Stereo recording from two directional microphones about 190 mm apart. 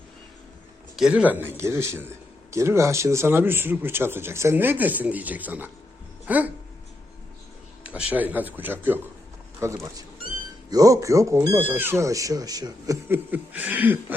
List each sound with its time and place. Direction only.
0.9 s speech: 5° right (ahead or behind)
7.9 s speech: 5° right (ahead or behind)